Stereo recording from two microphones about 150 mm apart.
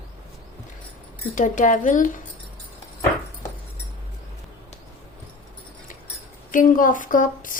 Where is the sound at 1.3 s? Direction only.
60° left (ahead or behind).